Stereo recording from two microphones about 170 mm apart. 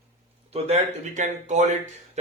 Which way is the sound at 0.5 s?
40° right (ahead or behind).